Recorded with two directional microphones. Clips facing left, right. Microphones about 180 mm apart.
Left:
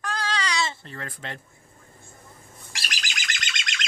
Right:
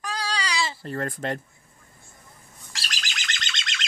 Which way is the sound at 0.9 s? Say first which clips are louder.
Right 9 dB; 45° right (ahead or behind).